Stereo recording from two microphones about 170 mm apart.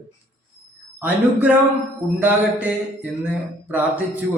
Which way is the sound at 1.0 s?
10° right (ahead or behind).